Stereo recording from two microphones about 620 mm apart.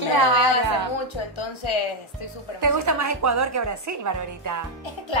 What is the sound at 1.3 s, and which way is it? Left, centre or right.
Speech, left.